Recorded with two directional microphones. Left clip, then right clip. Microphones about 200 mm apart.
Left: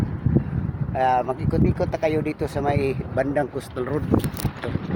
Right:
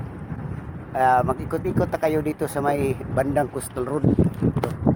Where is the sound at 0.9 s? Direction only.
20° right (ahead or behind).